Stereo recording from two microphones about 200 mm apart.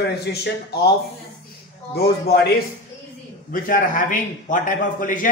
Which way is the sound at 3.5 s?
45° left (ahead or behind).